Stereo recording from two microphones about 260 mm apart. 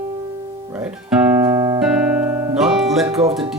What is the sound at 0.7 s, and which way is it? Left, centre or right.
Music, centre.